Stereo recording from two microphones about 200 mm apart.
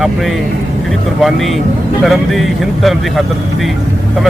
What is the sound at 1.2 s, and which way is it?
Speech, centre (ahead or behind).